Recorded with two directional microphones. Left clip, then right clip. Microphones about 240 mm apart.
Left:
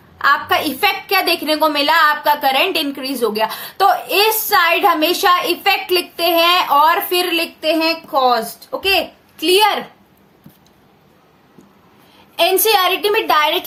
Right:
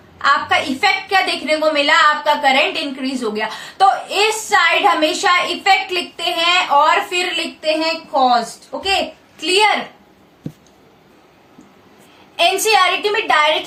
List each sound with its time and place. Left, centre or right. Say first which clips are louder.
0.2 s a woman's voice: even; left
12.4 s a woman's voice: even; left